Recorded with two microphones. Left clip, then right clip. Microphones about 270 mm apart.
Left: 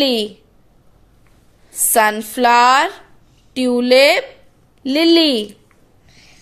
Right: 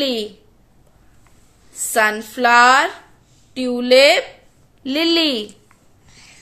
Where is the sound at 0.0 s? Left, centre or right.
Centre.